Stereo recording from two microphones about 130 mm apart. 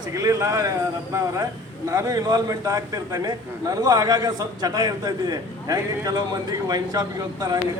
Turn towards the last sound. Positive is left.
turn(degrees=-30)  # may be behind; listen again after turning